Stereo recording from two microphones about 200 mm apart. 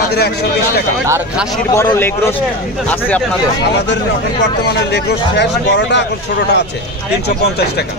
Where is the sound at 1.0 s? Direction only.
10° right (ahead or behind).